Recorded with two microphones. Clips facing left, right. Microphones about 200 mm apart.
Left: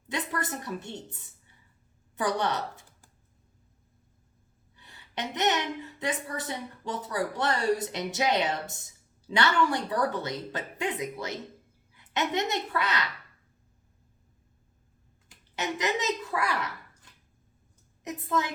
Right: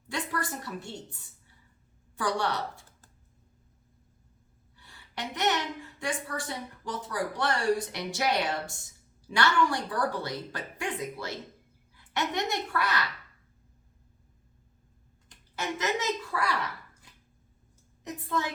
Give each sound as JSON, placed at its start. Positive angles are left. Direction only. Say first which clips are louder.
{"t": 0.1, "sound": "a sound", "louder": "left 1 dB", "side_deg": 20}
{"t": 2.1, "sound": "speech", "louder": "left 1 dB", "side_deg": 20}
{"t": 4.8, "sound": "a woman's voice", "louder": "left 3 dB", "side_deg": 20}
{"t": 15.5, "sound": "a woman's voice", "louder": "left 1 dB", "side_deg": 20}